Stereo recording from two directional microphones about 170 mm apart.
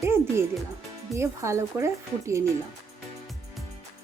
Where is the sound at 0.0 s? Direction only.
15° right (ahead or behind).